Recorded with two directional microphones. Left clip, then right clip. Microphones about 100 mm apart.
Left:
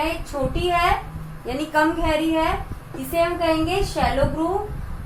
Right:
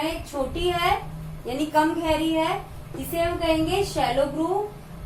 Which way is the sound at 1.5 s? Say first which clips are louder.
Left 2 dB; 30° right (ahead or behind).